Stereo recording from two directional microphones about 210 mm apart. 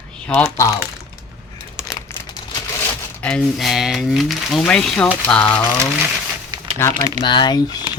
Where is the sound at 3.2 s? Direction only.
5° left (ahead or behind).